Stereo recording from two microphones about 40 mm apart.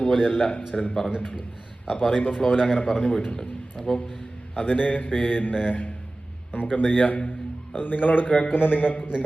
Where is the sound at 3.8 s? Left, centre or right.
Centre.